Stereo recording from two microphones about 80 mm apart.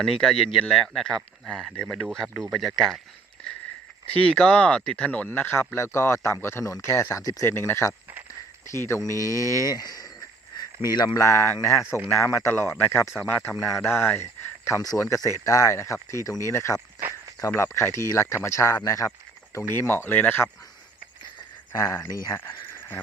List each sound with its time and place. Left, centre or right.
0.0 s speech: centre
4.0 s speech: centre
21.8 s speech: left
22.7 s a sound: left